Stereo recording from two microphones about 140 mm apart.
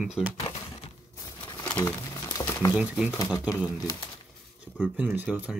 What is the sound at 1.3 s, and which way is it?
Crumpling, 30° left (ahead or behind).